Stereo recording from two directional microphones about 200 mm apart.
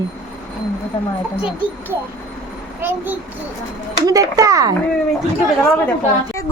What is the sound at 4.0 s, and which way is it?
Speech, 15° right (ahead or behind).